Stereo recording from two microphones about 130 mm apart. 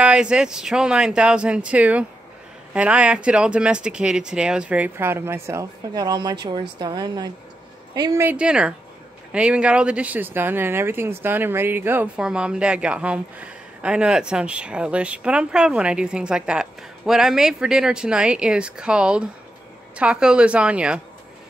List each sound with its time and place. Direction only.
0.0 s a woman's voice: 5° right (ahead or behind); by 8.2 s 30° right (ahead or behind)
8.2 s speech: 10° right (ahead or behind)